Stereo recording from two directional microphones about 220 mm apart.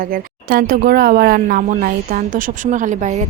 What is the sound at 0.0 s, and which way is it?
Speech, 40° right (ahead or behind).